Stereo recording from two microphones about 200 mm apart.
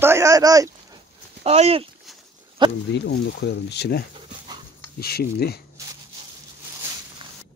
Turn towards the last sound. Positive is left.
turn(degrees=50)  # may be behind; listen again after turning